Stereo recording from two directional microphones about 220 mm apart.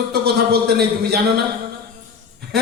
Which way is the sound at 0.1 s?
45° right (ahead or behind).